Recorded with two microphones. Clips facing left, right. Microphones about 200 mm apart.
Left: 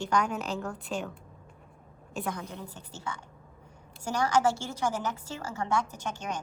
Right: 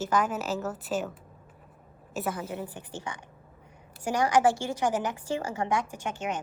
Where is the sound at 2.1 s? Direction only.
5° right (ahead or behind).